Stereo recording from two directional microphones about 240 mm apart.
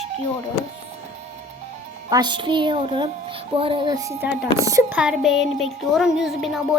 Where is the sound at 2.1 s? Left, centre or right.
Centre.